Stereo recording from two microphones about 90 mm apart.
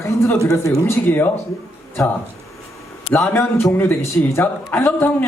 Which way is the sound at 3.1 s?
25° left (ahead or behind).